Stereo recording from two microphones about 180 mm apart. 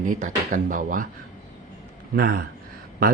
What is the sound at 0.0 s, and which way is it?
Speech, 45° right (ahead or behind).